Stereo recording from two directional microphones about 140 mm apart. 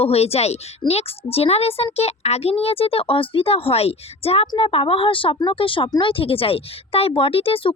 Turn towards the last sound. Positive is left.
turn(degrees=40)  # may be behind; listen again after turning